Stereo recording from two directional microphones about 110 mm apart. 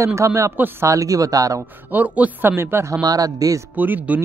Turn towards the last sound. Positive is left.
turn(degrees=-15)  # may be behind; listen again after turning